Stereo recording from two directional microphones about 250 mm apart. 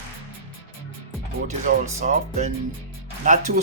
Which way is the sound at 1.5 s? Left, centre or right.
Right.